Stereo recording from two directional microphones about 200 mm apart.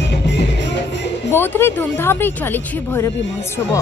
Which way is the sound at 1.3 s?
10° left (ahead or behind).